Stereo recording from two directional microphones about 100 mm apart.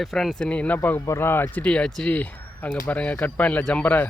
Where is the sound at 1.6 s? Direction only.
10° left (ahead or behind).